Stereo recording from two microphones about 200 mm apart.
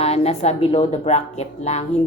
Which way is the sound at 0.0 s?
30° left (ahead or behind).